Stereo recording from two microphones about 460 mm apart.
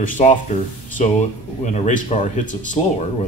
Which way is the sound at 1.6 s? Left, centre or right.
Centre.